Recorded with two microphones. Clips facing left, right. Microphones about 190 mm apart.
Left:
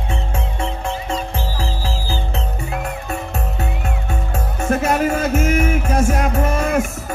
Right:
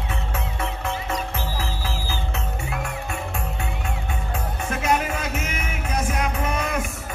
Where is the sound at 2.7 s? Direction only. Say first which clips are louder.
Left 6 dB; 40° left (ahead or behind).